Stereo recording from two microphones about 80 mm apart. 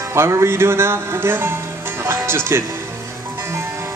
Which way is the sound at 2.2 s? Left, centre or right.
Right.